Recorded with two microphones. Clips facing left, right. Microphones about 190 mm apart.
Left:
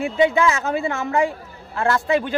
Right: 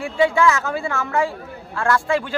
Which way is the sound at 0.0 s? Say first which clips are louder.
Even; 20° left (ahead or behind).